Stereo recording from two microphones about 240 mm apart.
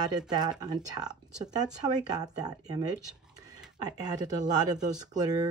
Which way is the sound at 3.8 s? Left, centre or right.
Centre.